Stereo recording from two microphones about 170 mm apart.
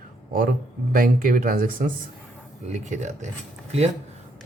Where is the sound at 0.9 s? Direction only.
55° right (ahead or behind).